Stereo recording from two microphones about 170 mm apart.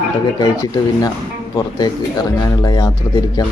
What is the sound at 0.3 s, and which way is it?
Speech, 20° left (ahead or behind).